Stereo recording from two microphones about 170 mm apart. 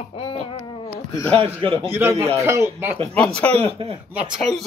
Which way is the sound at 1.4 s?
35° right (ahead or behind).